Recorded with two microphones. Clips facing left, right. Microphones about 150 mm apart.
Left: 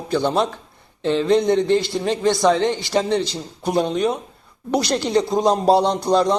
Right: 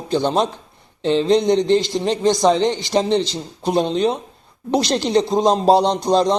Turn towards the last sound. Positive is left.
turn(degrees=-20)  # may be behind; listen again after turning